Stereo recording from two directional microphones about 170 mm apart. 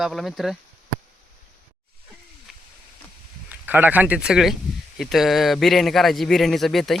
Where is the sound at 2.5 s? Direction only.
Centre (ahead or behind).